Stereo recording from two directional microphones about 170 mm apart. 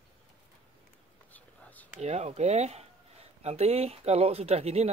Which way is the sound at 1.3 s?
10° left (ahead or behind).